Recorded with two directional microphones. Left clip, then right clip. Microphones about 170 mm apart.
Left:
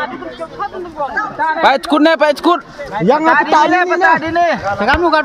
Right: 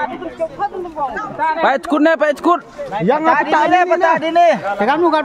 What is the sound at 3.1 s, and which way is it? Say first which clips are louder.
Speech: left 3 dB; 50° left (ahead or behind).